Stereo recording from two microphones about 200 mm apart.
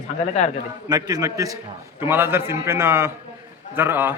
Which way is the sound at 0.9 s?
20° right (ahead or behind).